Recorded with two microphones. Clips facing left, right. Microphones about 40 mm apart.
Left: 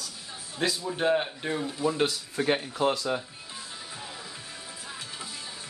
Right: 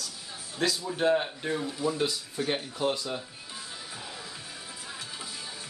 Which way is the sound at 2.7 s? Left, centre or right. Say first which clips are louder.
Left 3 dB; left.